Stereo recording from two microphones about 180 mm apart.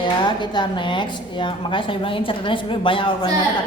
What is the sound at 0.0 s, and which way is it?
Speech, 25° left (ahead or behind).